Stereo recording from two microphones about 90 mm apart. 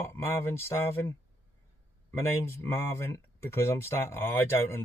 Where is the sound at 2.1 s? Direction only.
25° left (ahead or behind).